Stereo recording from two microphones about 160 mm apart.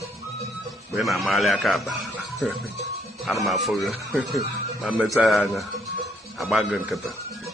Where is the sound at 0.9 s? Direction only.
Centre (ahead or behind).